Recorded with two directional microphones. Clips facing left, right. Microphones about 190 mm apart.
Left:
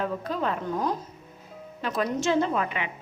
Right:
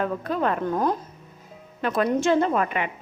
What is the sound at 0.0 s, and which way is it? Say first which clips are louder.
A woman's voice: right 4 dB; 55° right (ahead or behind).